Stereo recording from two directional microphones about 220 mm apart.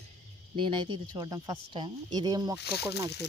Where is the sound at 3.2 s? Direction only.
50° left (ahead or behind).